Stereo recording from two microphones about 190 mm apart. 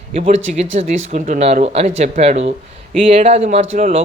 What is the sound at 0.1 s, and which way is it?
Speech, 35° right (ahead or behind).